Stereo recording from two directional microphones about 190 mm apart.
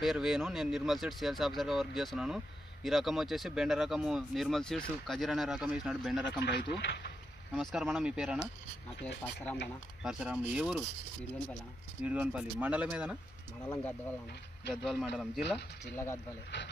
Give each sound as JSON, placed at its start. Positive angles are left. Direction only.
{"t": 0.0, "sound": "speech", "side_deg": 0}
{"t": 6.4, "sound": "speech", "side_deg": 65}
{"t": 7.5, "sound": "speech", "side_deg": 0}
{"t": 9.2, "sound": "speech", "side_deg": 5}
{"t": 10.0, "sound": "speech", "side_deg": -5}
{"t": 12.0, "sound": "speech", "side_deg": -5}
{"t": 14.7, "sound": "speech", "side_deg": 0}